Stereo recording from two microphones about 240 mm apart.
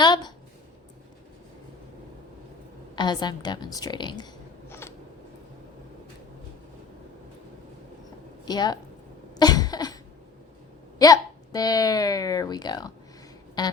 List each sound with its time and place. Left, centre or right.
0.0 s a sound: centre
2.9 s speech: centre
4.7 s a sound: centre
8.4 s speech: centre
9.3 s cough: centre
10.9 s speech: centre